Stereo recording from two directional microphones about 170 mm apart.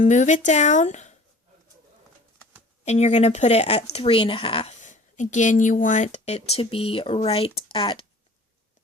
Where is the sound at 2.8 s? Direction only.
40° left (ahead or behind).